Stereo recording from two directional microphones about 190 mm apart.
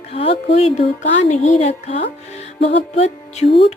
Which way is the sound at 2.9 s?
35° left (ahead or behind).